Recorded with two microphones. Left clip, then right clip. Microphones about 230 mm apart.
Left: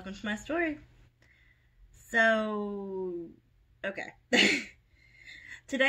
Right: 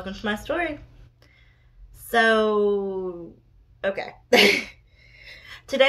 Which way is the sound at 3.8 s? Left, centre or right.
Centre.